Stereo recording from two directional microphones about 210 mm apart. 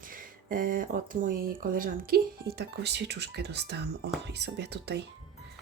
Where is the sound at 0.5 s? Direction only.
40° right (ahead or behind).